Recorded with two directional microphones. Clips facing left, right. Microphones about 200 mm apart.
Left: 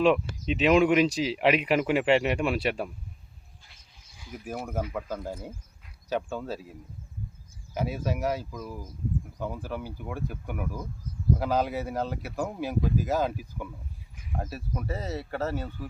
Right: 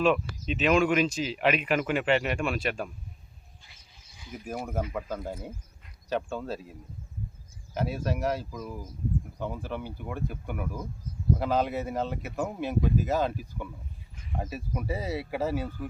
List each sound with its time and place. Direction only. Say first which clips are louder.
0.0 s speech: left 2 dB; 20° left (ahead or behind)
4.2 s speech: even; 5° left (ahead or behind)
14.2 s a sound: even; 5° left (ahead or behind)
14.7 s speech: right 2 dB; 10° right (ahead or behind)